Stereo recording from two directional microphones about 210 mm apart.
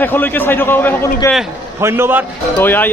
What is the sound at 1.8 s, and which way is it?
Speech, 10° right (ahead or behind).